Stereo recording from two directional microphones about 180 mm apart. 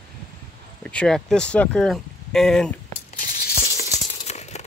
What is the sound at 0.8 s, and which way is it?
Speech, 5° left (ahead or behind).